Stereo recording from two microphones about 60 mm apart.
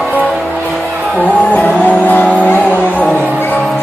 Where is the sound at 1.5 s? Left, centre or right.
Left.